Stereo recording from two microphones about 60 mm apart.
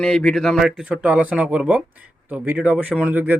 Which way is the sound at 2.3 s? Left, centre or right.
Right.